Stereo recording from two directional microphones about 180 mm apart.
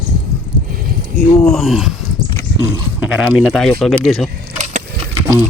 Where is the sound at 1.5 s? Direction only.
Centre (ahead or behind).